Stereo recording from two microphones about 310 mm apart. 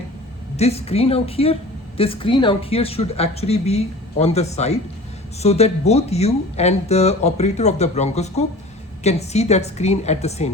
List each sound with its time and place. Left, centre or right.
0.5 s speech: centre